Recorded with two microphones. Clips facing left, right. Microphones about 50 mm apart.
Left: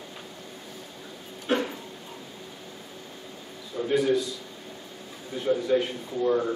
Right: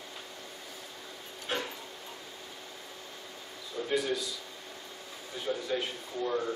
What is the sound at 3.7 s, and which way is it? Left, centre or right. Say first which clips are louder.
Speech: left 7 dB; centre.